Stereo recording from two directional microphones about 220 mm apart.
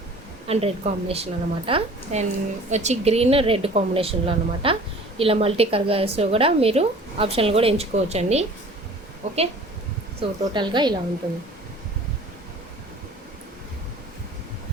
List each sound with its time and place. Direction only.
0.4 s a woman's voice: 25° right (ahead or behind)